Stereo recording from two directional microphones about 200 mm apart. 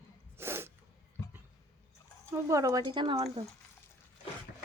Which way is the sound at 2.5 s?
15° right (ahead or behind).